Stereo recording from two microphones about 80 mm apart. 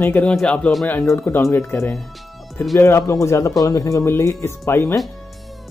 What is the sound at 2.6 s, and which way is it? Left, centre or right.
Speech, left.